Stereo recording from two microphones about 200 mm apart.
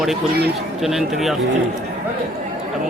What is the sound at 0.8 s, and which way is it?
Speech, centre (ahead or behind).